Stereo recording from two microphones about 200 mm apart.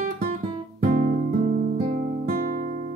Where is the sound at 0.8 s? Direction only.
45° right (ahead or behind).